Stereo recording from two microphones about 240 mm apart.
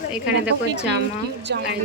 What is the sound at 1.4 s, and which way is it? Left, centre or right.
Speech, right.